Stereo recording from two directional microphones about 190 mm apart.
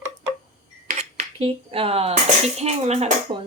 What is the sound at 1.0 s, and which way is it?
Speech, 30° right (ahead or behind).